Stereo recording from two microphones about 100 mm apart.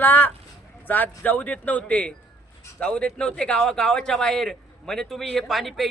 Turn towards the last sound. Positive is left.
turn(degrees=0)  # may be behind; listen again after turning